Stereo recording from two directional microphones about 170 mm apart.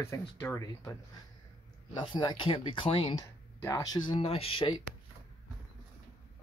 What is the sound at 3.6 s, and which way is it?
Speech, 20° left (ahead or behind).